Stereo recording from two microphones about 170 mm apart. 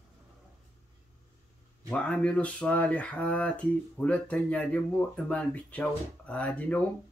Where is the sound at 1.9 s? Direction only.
5° left (ahead or behind).